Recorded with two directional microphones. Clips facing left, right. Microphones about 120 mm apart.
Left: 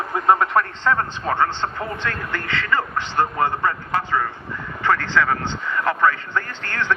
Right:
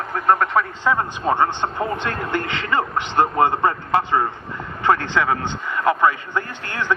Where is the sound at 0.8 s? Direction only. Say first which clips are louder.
Right 1 dB; 15° right (ahead or behind).